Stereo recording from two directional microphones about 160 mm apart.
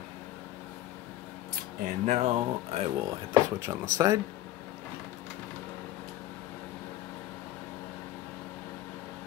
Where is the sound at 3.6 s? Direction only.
20° right (ahead or behind).